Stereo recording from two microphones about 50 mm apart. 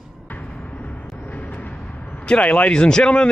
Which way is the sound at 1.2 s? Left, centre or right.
Left.